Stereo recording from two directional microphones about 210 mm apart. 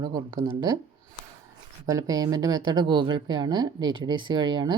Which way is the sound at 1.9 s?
15° right (ahead or behind).